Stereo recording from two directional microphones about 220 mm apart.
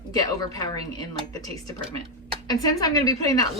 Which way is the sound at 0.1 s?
15° left (ahead or behind).